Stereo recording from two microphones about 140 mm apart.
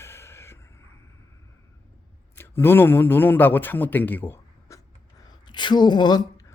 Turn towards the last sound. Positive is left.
turn(degrees=30)  # may be behind; listen again after turning